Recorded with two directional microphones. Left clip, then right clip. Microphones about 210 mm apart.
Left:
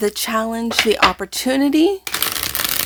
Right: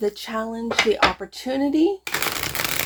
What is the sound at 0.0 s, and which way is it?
Speech, 35° left (ahead or behind).